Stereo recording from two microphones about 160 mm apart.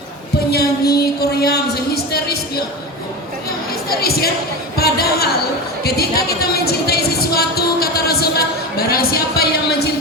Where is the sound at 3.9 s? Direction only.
75° left (ahead or behind).